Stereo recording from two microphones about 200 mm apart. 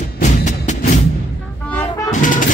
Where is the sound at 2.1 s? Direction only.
40° left (ahead or behind).